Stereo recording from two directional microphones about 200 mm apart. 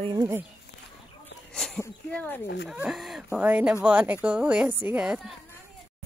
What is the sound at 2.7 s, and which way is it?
Speech, centre (ahead or behind).